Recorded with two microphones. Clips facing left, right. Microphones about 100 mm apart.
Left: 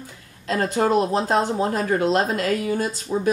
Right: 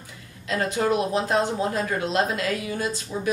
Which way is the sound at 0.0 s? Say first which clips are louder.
Left 4 dB; 35° left (ahead or behind).